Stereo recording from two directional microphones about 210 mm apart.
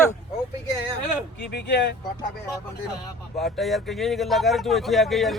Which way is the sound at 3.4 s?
Centre (ahead or behind).